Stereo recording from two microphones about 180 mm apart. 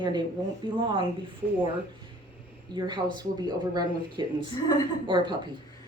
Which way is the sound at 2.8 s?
25° right (ahead or behind).